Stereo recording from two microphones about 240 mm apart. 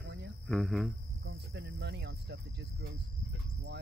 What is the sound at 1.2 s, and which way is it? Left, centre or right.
Speech, right.